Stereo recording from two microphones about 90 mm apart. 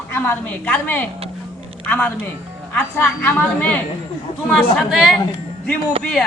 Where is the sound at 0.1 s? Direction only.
20° left (ahead or behind).